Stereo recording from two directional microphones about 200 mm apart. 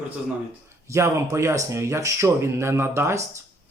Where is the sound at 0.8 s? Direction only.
15° right (ahead or behind).